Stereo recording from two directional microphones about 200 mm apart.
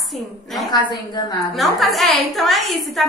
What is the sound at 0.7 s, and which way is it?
Speech, 20° left (ahead or behind).